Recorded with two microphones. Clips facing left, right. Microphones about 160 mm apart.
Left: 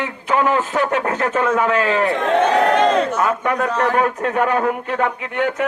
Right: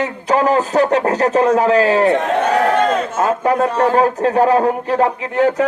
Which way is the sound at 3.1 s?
30° right (ahead or behind).